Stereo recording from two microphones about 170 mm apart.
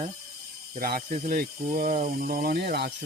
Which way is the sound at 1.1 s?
60° right (ahead or behind).